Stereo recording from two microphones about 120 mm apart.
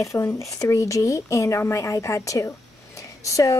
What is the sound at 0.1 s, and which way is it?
A woman's voice, 25° left (ahead or behind).